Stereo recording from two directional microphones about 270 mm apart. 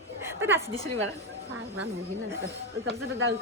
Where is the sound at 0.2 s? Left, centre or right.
Centre.